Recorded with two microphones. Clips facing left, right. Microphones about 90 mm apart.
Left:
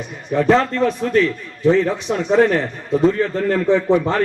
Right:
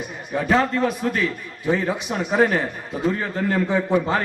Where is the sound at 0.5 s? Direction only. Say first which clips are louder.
Left 1 dB; 10° right (ahead or behind).